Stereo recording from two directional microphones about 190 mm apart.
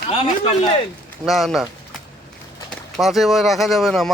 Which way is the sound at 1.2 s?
Centre (ahead or behind).